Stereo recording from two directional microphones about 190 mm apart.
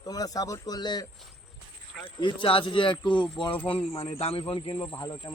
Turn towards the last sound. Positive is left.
turn(degrees=20)  # may be behind; listen again after turning